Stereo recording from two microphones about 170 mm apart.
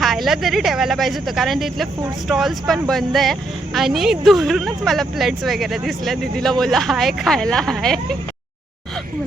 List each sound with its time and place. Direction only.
0.0 s speech: centre (ahead or behind)